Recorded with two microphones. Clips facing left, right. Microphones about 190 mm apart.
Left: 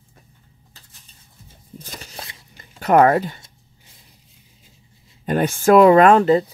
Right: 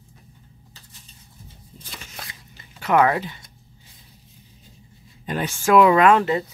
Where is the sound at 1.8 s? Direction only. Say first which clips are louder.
Left 3 dB; 40° left (ahead or behind).